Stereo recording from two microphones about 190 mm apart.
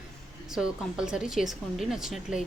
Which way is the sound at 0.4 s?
5° right (ahead or behind).